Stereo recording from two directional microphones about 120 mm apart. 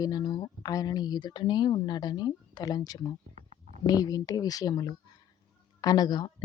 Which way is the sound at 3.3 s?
70° right (ahead or behind).